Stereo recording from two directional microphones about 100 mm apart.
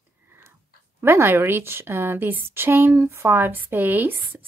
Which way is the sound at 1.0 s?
25° right (ahead or behind).